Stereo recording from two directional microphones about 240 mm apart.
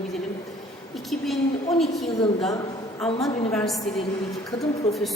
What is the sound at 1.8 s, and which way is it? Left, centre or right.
A woman's voice, centre.